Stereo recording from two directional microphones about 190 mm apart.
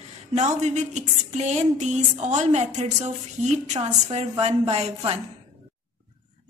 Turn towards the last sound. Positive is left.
turn(degrees=-35)  # may be behind; listen again after turning